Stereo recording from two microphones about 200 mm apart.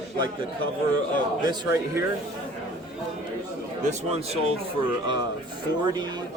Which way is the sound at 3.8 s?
30° right (ahead or behind).